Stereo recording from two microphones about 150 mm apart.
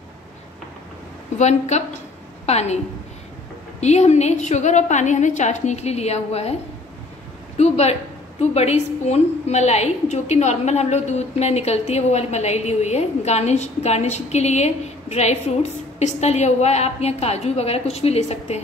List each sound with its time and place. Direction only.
1.4 s a woman's voice: 50° left (ahead or behind)
3.8 s a woman's voice: 50° left (ahead or behind)
7.5 s a woman's voice: 45° left (ahead or behind)